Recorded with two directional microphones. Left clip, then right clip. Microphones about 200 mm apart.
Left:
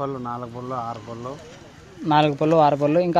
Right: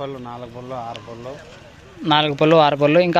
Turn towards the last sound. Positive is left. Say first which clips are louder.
# right 3 dB
turn(degrees=0)  # may be behind; listen again after turning